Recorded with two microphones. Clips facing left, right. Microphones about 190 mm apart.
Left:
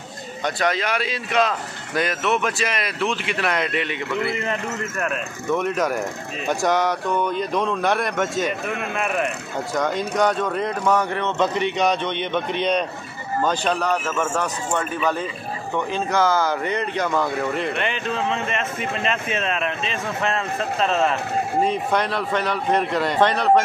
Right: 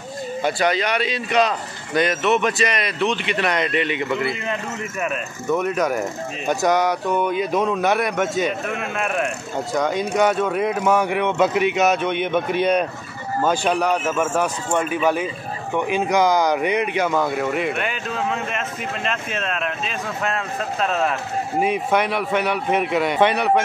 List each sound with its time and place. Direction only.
0.4 s speech: 5° right (ahead or behind)